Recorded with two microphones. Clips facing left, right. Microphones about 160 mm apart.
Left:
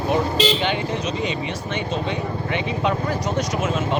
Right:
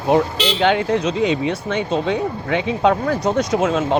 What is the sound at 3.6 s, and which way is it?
Speech, 90° right.